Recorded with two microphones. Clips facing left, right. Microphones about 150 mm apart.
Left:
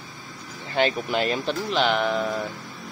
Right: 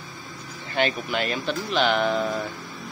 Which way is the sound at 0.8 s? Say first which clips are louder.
Left 2 dB; 25° left (ahead or behind).